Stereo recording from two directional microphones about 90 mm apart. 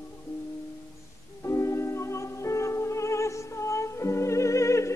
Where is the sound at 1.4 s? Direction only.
35° left (ahead or behind).